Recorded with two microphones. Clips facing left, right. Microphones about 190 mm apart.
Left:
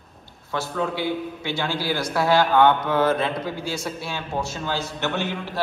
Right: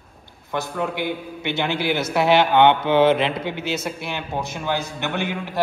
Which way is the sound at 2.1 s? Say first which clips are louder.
Right 2 dB; 20° right (ahead or behind).